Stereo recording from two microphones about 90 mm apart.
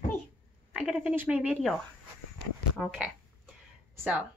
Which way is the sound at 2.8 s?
10° left (ahead or behind).